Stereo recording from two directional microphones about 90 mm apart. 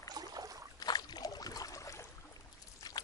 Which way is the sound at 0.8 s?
50° left (ahead or behind).